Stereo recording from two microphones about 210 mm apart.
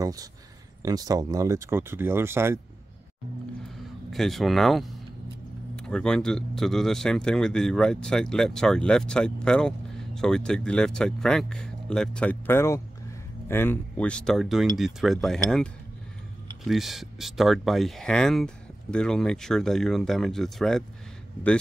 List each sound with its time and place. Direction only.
0.0 s speech: 15° right (ahead or behind)
3.6 s speech: centre (ahead or behind)